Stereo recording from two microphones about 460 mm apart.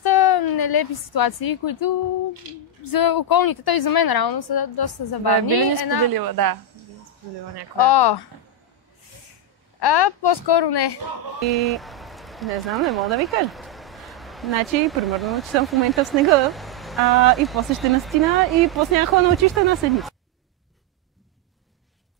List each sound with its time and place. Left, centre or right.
0.0 s a woman's voice: left
6.0 s a woman's voice: right
7.7 s a woman's voice: left
9.8 s a woman's voice: left
11.4 s speech: centre